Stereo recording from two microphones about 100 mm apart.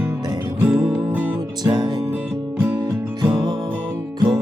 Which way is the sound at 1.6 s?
45° right (ahead or behind).